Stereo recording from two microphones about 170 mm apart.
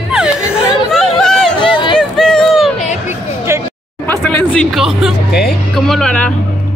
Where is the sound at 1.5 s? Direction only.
30° left (ahead or behind).